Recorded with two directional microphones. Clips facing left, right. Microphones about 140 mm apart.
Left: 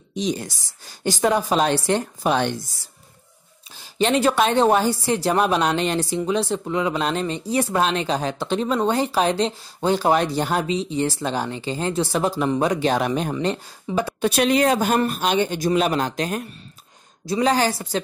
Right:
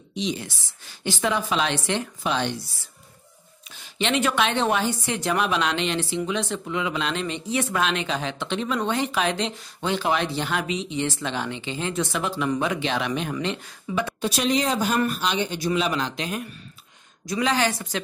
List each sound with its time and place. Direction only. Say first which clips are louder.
0.1 s a woman's voice: left 4 dB; 45° left (ahead or behind)
3.7 s a woman's voice: left 5 dB; 35° left (ahead or behind)
14.2 s a woman's voice: left 6 dB; 60° left (ahead or behind); by 18.0 s 35° left (ahead or behind)